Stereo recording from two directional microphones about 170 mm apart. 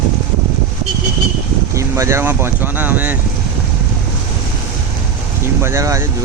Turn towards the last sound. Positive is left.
turn(degrees=-15)  # may be behind; listen again after turning